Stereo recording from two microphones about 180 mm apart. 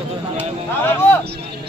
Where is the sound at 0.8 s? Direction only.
10° left (ahead or behind).